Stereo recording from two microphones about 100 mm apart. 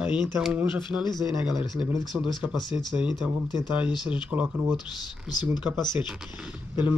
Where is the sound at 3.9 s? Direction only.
45° left (ahead or behind).